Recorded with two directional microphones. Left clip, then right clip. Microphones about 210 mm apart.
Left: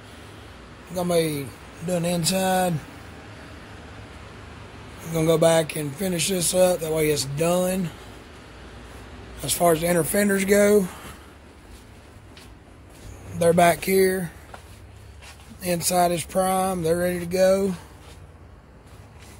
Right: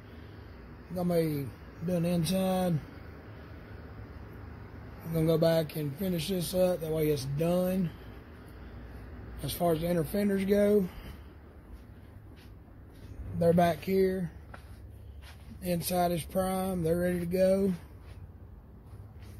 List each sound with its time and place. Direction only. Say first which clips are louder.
1.0 s a man's voice: left 7 dB; centre (ahead or behind)
5.1 s a man's voice: left 8 dB; 5° left (ahead or behind)
9.6 s speech: left 9 dB; 15° left (ahead or behind)
13.5 s speech: left 9 dB; 15° left (ahead or behind)
15.6 s a man's voice: left 9 dB; 5° left (ahead or behind)